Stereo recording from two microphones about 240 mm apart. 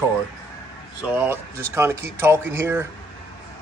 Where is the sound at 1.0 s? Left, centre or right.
Centre.